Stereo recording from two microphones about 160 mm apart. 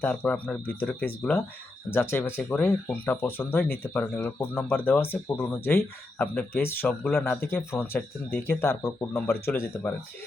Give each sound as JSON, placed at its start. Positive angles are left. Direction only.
{"t": 0.0, "sound": "speech", "side_deg": 10}